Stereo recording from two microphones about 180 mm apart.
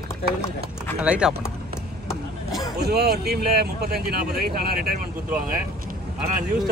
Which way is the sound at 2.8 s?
60° right (ahead or behind).